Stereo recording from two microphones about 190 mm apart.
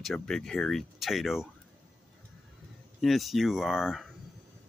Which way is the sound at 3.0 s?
Centre (ahead or behind).